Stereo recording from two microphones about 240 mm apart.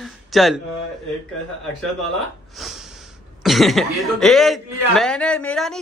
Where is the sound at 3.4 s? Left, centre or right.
Centre.